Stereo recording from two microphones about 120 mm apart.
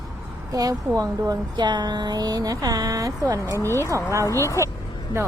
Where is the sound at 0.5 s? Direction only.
30° right (ahead or behind).